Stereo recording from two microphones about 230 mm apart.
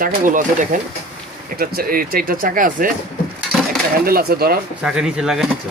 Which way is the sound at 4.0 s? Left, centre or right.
Right.